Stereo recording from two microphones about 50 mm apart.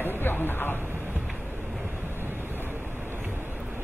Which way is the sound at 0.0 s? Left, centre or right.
Left.